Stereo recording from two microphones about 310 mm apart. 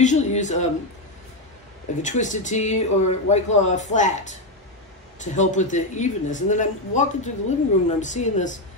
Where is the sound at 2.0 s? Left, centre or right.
Left.